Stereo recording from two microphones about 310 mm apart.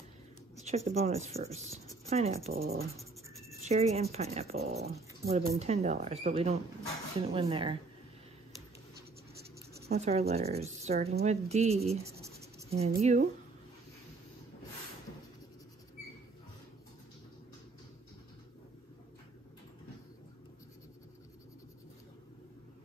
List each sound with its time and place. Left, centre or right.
0.6 s speech: right
9.8 s speech: right
12.4 s writing: centre
12.7 s speech: centre